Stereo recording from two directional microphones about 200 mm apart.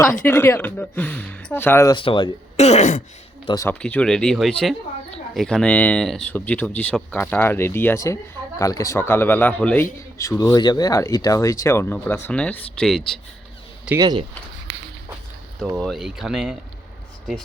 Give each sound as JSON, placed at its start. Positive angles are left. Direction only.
{"t": 0.0, "sound": "speech", "side_deg": 10}
{"t": 3.4, "sound": "speech", "side_deg": 15}
{"t": 3.8, "sound": "speech", "side_deg": 5}
{"t": 14.0, "sound": "speech", "side_deg": -20}
{"t": 15.8, "sound": "speech", "side_deg": 0}